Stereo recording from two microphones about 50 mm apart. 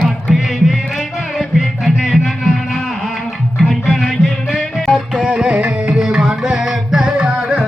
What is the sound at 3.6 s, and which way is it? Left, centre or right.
Music, centre.